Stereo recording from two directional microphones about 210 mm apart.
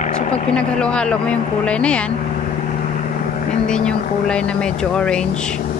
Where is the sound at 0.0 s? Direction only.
35° left (ahead or behind).